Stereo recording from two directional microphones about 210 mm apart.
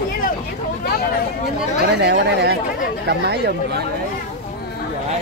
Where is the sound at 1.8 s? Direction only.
50° right (ahead or behind).